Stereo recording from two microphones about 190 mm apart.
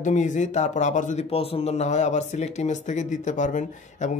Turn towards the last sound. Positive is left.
turn(degrees=40)  # may be behind; listen again after turning